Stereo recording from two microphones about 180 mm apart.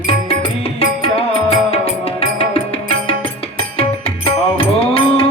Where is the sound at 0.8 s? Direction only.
35° left (ahead or behind).